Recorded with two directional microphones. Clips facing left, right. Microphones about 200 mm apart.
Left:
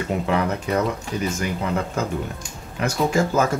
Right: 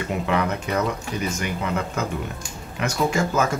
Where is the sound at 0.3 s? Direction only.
35° left (ahead or behind).